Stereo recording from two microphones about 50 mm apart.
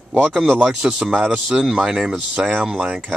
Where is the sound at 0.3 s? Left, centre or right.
Centre.